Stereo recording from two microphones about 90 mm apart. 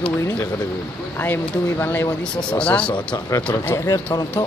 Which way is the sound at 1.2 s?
20° left (ahead or behind).